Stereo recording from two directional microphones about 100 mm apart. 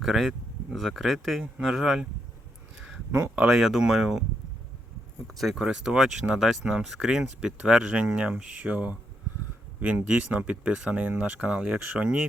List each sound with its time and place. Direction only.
0.0 s speech: centre (ahead or behind)
3.1 s speech: 25° right (ahead or behind)
3.3 s speech: 5° right (ahead or behind)
5.3 s speech: centre (ahead or behind)